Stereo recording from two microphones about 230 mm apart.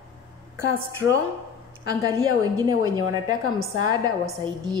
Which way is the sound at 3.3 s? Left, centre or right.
Right.